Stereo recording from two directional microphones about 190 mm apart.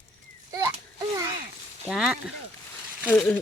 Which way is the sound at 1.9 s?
5° right (ahead or behind).